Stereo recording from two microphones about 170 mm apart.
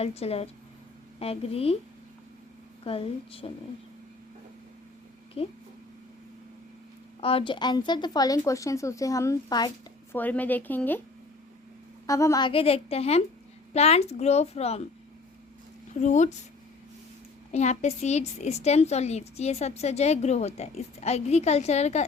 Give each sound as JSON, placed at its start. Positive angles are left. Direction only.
{"t": 0.0, "sound": "a woman's voice", "side_deg": 35}
{"t": 2.8, "sound": "a woman's voice", "side_deg": 35}
{"t": 5.4, "sound": "a woman's voice", "side_deg": 35}
{"t": 7.2, "sound": "speech", "side_deg": 35}
{"t": 10.1, "sound": "a woman's voice", "side_deg": 10}
{"t": 12.0, "sound": "a woman's voice", "side_deg": 20}
{"t": 16.0, "sound": "speech", "side_deg": 45}
{"t": 17.5, "sound": "a woman's voice", "side_deg": 40}